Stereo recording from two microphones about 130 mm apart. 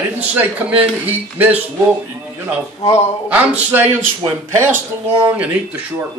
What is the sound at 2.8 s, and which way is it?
Speech, 55° left (ahead or behind).